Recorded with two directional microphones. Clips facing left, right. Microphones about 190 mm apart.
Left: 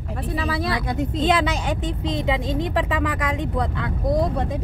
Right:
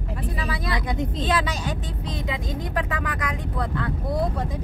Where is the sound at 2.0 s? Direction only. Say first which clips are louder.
Left 7 dB; 25° left (ahead or behind).